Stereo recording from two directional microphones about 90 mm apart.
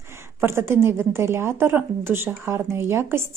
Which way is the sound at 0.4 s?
30° right (ahead or behind).